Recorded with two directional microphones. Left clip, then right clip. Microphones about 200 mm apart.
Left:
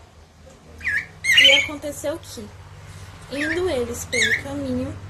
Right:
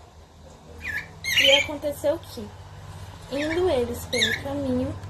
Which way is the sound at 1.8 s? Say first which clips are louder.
Right 3 dB; 10° left (ahead or behind).